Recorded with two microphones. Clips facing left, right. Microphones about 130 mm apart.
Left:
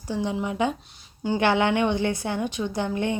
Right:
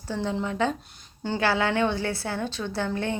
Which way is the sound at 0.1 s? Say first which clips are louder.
Left 1 dB; 15° left (ahead or behind).